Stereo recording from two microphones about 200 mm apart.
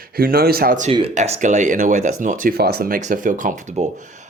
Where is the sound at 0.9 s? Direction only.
30° right (ahead or behind).